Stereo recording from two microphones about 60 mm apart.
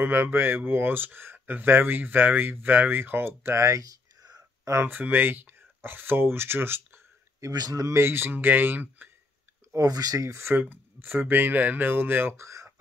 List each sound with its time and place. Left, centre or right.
0.0 s speech: right
3.6 s a sound: right
4.8 s speech: right
7.3 s speech: right
7.9 s speech: right
9.8 s speech: right
10.5 s speech: right
12.4 s a sound: right